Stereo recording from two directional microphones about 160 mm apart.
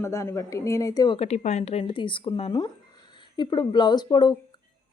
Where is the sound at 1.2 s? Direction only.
45° left (ahead or behind).